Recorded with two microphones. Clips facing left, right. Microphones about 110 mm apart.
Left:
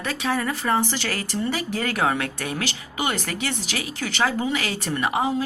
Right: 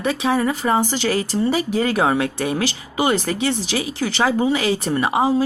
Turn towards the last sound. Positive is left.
turn(degrees=-30)  # may be behind; listen again after turning